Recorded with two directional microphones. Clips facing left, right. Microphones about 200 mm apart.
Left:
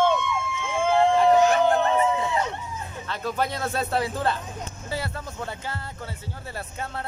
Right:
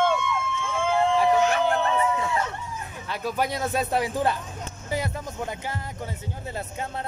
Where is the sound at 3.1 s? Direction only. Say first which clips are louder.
Right 1 dB; 10° right (ahead or behind).